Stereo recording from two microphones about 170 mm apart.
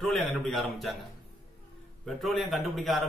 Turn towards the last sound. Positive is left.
turn(degrees=0)  # may be behind; listen again after turning